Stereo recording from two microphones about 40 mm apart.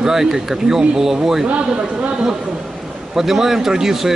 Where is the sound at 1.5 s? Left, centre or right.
Right.